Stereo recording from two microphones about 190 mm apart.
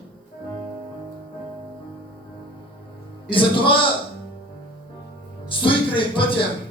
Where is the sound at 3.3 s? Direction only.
25° left (ahead or behind).